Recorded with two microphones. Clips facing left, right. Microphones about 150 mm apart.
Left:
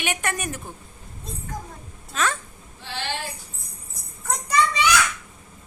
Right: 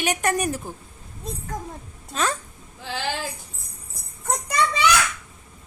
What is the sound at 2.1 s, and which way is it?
Speech, 35° right (ahead or behind).